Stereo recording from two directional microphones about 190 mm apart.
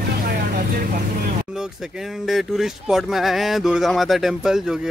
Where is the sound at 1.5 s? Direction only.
5° right (ahead or behind).